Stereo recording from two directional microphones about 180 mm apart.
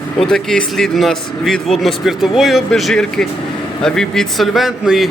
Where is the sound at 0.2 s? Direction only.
Centre (ahead or behind).